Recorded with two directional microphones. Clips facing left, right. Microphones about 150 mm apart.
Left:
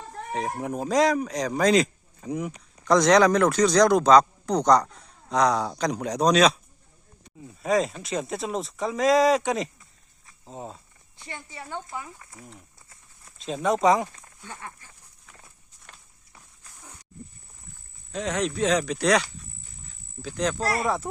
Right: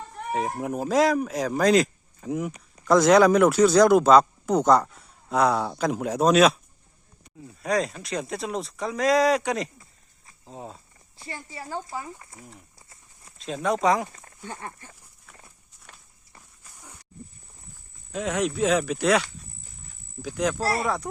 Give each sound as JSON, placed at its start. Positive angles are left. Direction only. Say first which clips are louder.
{"t": 0.3, "sound": "speech", "louder": "right 1 dB", "side_deg": 0}
{"t": 11.7, "sound": "speech", "louder": "right 2 dB", "side_deg": -35}
{"t": 12.3, "sound": "speech", "louder": "left 1 dB", "side_deg": 0}
{"t": 14.4, "sound": "speech", "louder": "right 4 dB", "side_deg": -50}
{"t": 18.1, "sound": "speech", "louder": "right 1 dB", "side_deg": -10}
{"t": 20.2, "sound": "speech", "louder": "right 1 dB", "side_deg": -10}